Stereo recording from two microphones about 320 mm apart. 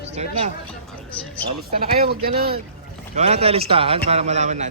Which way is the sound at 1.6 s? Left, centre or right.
Right.